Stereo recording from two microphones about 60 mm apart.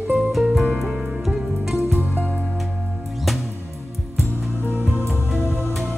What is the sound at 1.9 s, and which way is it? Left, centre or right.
Music, left.